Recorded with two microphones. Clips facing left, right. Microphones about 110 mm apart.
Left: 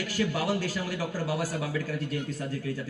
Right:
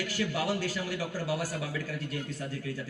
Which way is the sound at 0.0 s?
40° left (ahead or behind).